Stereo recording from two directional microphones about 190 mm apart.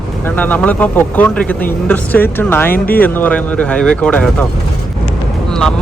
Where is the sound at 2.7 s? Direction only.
50° left (ahead or behind).